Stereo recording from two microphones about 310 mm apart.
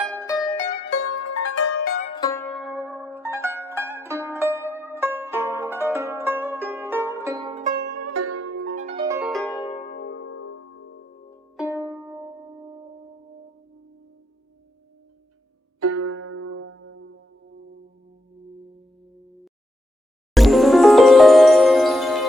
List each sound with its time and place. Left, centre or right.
0.0 s mandolin: centre
0.9 s music: left
1.8 s music: left; by 7.9 s right
7.9 s zither: right
8.6 s music: right; by 9.6 s centre
9.6 s zither: centre
9.9 s music: left
11.5 s music: centre
16.0 s music: right
20.3 s music: centre